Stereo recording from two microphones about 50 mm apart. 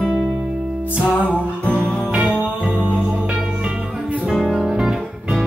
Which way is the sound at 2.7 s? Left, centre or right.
Centre.